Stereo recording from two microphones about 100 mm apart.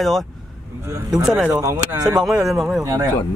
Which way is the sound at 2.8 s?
35° right (ahead or behind).